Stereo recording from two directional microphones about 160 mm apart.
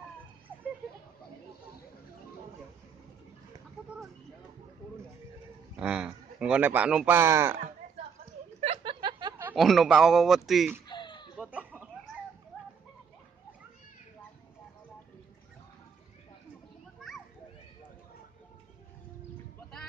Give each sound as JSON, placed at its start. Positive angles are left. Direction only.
{"t": 5.8, "sound": "speech", "side_deg": -5}
{"t": 8.5, "sound": "chuckle", "side_deg": -40}
{"t": 9.6, "sound": "speech", "side_deg": 0}
{"t": 10.9, "sound": "chicken", "side_deg": 30}
{"t": 11.3, "sound": "chicken", "side_deg": -10}